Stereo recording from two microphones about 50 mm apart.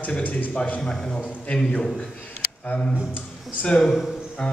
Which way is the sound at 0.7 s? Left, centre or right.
Centre.